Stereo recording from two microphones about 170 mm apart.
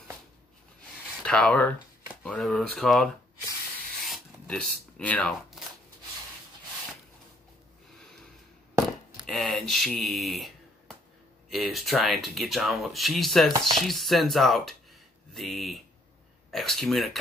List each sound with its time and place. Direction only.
1.2 s speech: 5° left (ahead or behind)
4.0 s shuffling cards: centre (ahead or behind)
9.2 s speech: 5° left (ahead or behind)
11.5 s speech: centre (ahead or behind)